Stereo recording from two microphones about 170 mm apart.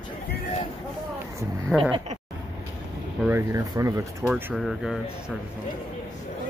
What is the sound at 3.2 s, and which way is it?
Speech, 15° right (ahead or behind).